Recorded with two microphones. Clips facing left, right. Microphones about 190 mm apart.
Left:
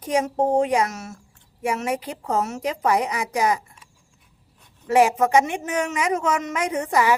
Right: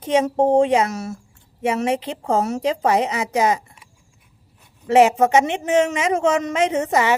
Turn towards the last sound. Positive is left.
turn(degrees=-25)  # may be behind; listen again after turning